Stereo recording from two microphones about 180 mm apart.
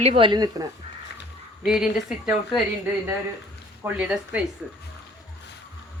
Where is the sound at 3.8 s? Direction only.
5° right (ahead or behind).